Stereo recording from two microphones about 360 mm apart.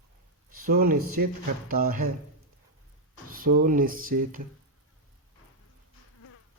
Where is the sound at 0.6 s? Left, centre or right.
Right.